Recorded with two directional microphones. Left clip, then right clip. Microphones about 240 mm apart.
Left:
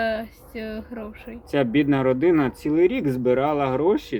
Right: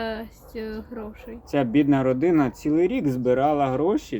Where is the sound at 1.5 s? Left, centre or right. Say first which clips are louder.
Even; centre.